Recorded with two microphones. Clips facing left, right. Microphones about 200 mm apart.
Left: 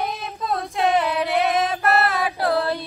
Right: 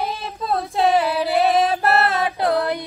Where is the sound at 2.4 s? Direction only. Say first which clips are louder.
Right 1 dB; 15° right (ahead or behind).